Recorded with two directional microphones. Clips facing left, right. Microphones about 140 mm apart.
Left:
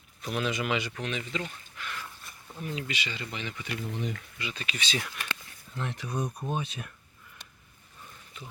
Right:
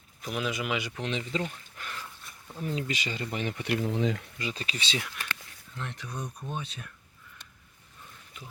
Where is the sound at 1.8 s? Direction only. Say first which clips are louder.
Left 2 dB; 45° right (ahead or behind).